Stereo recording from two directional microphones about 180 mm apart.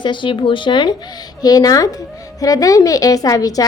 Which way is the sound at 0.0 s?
25° left (ahead or behind).